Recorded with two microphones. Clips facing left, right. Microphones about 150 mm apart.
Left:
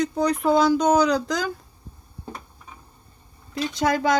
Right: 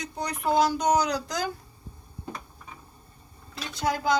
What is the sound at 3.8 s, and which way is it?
Speech, 90° left.